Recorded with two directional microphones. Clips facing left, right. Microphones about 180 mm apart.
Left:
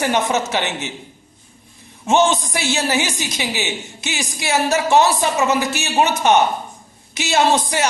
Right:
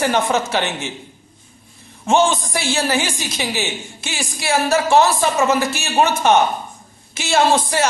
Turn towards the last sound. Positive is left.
turn(degrees=15)  # may be behind; listen again after turning